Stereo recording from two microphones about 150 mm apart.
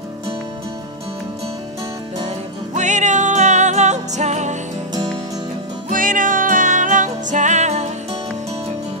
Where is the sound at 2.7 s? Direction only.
55° right (ahead or behind).